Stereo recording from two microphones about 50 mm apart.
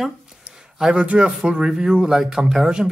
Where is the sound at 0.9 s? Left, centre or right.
Right.